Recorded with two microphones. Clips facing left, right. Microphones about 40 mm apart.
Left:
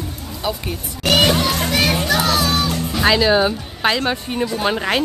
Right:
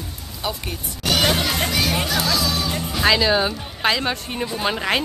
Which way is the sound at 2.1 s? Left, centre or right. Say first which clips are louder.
Left 4 dB; left.